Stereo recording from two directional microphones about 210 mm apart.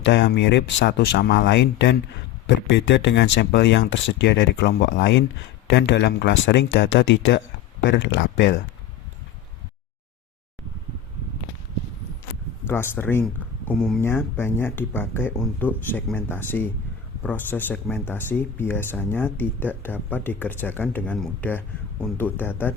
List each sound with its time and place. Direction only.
0.0 s speech: 55° left (ahead or behind)
12.6 s speech: 10° left (ahead or behind)
13.7 s speech: centre (ahead or behind)
14.0 s speech: 10° left (ahead or behind)